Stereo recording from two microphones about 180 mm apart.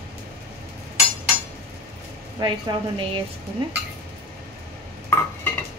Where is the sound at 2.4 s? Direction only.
25° right (ahead or behind).